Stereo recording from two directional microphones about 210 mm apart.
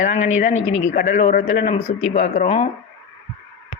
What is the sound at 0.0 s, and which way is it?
Speech, 35° left (ahead or behind).